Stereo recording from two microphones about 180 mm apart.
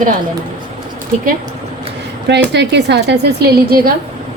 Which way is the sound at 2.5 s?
70° right (ahead or behind).